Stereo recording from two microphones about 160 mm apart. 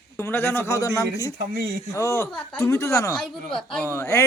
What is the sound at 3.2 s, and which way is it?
Speech, centre (ahead or behind).